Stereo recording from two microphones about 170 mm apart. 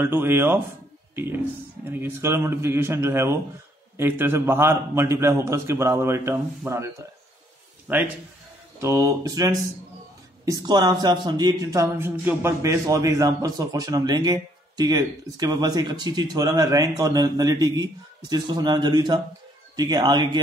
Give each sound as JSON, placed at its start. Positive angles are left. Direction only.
{"t": 0.0, "sound": "a man's voice", "side_deg": -15}